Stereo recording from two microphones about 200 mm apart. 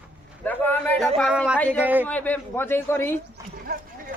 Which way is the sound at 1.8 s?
10° right (ahead or behind).